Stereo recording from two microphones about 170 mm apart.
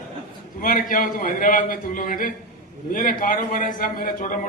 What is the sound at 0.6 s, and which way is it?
A man's voice, 50° left (ahead or behind).